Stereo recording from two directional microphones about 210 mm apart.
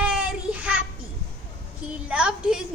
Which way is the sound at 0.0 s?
5° right (ahead or behind).